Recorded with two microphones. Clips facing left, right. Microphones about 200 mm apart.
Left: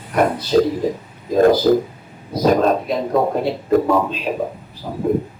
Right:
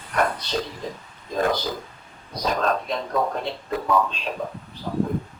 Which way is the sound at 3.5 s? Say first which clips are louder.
Left 13 dB; 50° left (ahead or behind).